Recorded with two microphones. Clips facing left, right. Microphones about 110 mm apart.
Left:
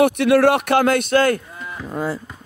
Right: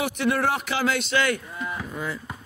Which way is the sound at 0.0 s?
70° left (ahead or behind).